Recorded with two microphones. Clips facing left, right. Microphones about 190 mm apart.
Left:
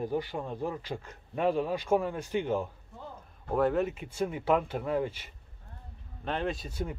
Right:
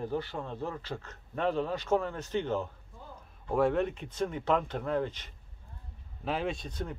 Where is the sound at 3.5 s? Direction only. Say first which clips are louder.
Even; centre (ahead or behind).